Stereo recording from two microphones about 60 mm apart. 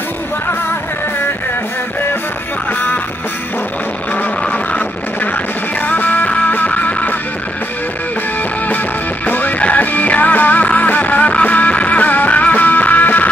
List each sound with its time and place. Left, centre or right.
4.5 s music: left
9.2 s music: left